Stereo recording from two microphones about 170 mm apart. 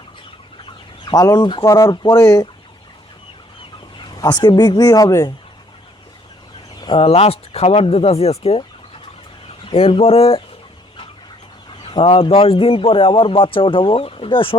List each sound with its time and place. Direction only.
1.0 s speech: 20° left (ahead or behind)
3.9 s speech: 25° left (ahead or behind)
6.7 s a man's voice: 30° left (ahead or behind)
9.6 s a man's voice: 30° left (ahead or behind)
11.8 s a man's voice: 30° left (ahead or behind)